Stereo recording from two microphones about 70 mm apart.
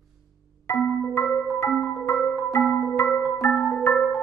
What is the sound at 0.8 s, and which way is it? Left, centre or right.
Marimba, centre.